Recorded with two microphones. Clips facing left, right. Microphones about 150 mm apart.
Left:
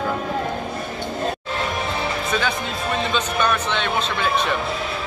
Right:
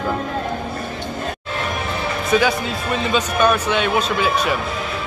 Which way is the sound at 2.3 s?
10° right (ahead or behind).